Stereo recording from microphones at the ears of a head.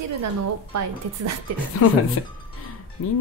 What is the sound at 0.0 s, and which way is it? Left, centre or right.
Music, right.